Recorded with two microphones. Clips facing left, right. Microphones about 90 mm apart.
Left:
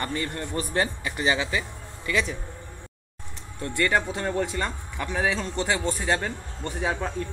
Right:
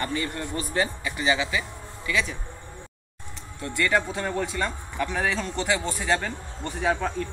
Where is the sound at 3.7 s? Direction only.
30° left (ahead or behind).